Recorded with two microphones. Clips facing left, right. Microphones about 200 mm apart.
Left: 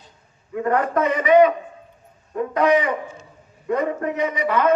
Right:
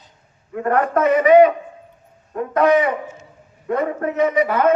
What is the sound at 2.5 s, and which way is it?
A man's voice, 50° right (ahead or behind).